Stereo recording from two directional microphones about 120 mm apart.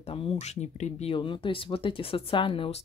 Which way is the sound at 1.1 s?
40° left (ahead or behind).